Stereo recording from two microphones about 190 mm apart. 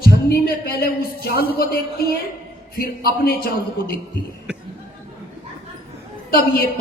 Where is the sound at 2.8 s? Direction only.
55° left (ahead or behind).